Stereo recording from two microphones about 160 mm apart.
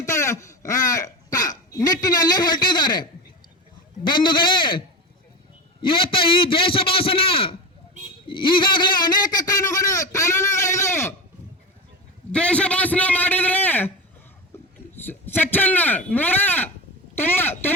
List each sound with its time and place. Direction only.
0.0 s hiccup: 15° left (ahead or behind)
4.0 s a man's voice: 30° left (ahead or behind)
5.8 s a man's voice: 35° left (ahead or behind)
8.3 s a sound: 30° left (ahead or behind)
12.3 s a man's voice: 5° left (ahead or behind)
15.0 s a woman's voice: 10° left (ahead or behind)